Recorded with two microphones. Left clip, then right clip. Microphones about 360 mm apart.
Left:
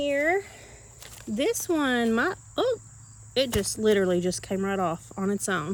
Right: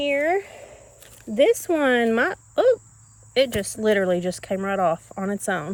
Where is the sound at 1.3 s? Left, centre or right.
Centre.